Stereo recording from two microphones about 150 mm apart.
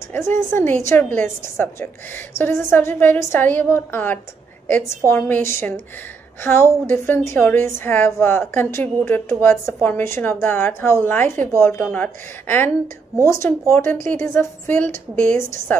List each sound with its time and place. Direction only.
0.1 s a woman's voice: 15° left (ahead or behind)
15.2 s a woman's voice: 65° right (ahead or behind)